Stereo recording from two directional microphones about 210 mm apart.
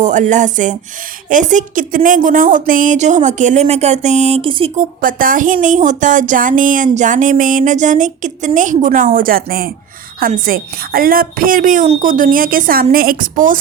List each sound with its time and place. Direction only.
0.0 s a woman's voice: 35° right (ahead or behind)
4.8 s a woman's voice: 40° right (ahead or behind)